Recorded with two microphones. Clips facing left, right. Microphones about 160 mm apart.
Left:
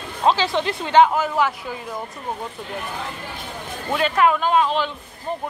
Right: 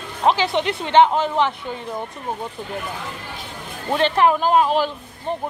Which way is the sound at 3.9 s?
30° right (ahead or behind).